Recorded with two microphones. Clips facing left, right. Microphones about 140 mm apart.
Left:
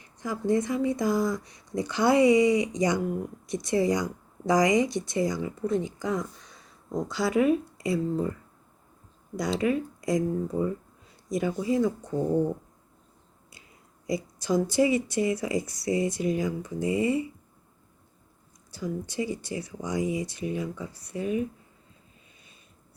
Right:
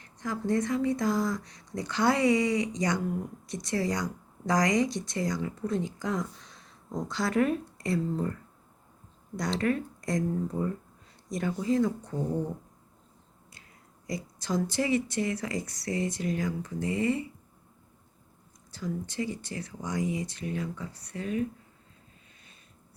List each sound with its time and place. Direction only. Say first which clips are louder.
0.0 s speech: left 2 dB; 10° left (ahead or behind)
14.1 s speech: left 5 dB; 10° left (ahead or behind)
18.7 s speech: left 2 dB; 10° left (ahead or behind)